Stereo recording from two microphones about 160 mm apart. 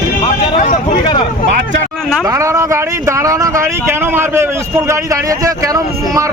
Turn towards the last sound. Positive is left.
turn(degrees=-20)  # may be behind; listen again after turning